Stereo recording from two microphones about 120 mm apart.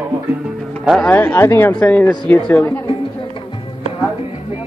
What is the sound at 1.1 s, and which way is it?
Speech, 15° left (ahead or behind).